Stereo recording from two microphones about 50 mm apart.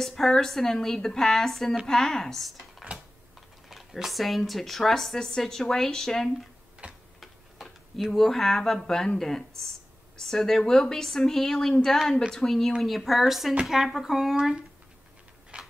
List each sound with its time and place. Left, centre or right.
0.0 s speech: centre
3.6 s speech: centre
6.8 s tick-tock: right
7.2 s tick-tock: centre
9.2 s speech: centre
15.5 s a sound: right